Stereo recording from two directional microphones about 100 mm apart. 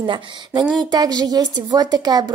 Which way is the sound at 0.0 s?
55° right (ahead or behind).